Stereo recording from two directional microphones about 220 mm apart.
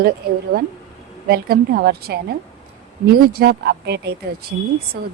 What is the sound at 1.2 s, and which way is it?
A woman's voice, 45° right (ahead or behind).